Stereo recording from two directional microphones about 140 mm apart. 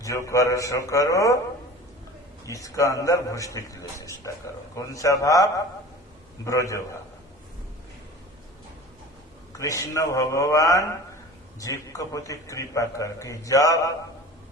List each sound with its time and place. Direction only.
0.0 s a man's voice: 25° left (ahead or behind)
2.5 s a man's voice: 25° left (ahead or behind)
9.6 s a man's voice: 20° left (ahead or behind)